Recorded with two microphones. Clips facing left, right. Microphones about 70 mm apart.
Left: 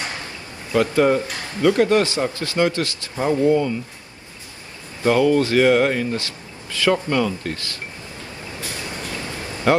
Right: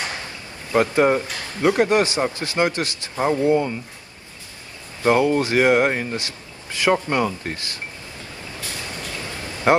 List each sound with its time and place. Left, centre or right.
0.7 s speech: right
5.0 s speech: right
9.7 s speech: right